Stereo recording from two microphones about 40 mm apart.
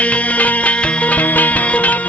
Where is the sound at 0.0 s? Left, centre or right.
Left.